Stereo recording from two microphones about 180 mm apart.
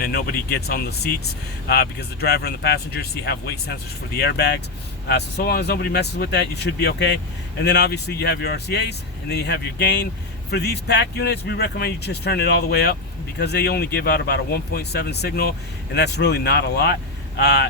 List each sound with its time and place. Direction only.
0.0 s speech: 60° left (ahead or behind)